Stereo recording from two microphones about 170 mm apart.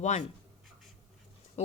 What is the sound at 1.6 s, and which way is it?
Speech, 40° left (ahead or behind).